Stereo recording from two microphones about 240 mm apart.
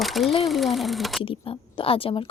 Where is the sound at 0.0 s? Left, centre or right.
Centre.